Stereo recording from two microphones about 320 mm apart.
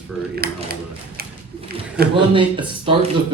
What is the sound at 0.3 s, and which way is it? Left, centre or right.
Speech, right.